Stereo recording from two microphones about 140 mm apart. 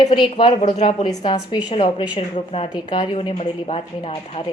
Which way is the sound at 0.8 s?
35° left (ahead or behind).